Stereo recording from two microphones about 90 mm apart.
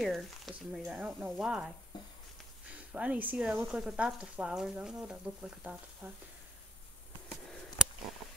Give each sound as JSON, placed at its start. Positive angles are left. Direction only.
{"t": 0.0, "sound": "speech", "side_deg": 0}
{"t": 2.9, "sound": "speech", "side_deg": -15}
{"t": 6.0, "sound": "speech", "side_deg": -20}